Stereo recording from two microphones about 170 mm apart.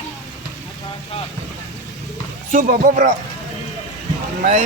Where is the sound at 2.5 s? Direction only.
55° right (ahead or behind).